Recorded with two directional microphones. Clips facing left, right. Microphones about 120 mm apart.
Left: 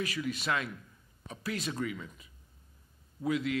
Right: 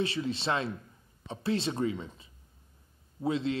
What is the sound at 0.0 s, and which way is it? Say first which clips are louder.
A man's voice: right 3 dB; 30° right (ahead or behind).